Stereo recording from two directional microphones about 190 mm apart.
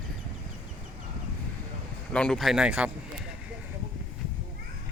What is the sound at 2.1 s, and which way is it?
Speech, 5° left (ahead or behind).